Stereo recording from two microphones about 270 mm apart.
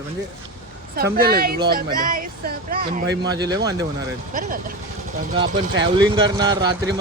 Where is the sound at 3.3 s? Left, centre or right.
Centre.